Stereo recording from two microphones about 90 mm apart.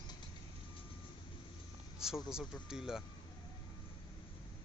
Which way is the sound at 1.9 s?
5° right (ahead or behind).